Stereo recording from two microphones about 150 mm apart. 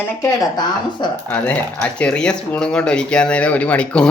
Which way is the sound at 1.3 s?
10° left (ahead or behind).